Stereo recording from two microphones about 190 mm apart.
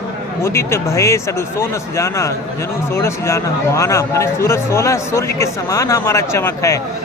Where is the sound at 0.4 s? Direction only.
15° left (ahead or behind).